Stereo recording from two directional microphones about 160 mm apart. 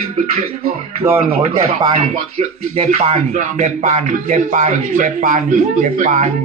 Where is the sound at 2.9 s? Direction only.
50° right (ahead or behind).